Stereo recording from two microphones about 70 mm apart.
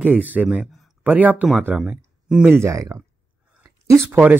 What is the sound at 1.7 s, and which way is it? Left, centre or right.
Speech, centre.